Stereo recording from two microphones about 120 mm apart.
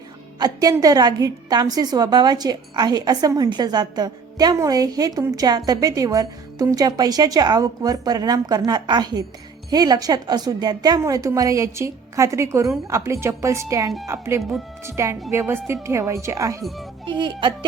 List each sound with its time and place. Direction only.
0.3 s a woman's voice: 30° right (ahead or behind)
17.1 s a woman's voice: 40° right (ahead or behind)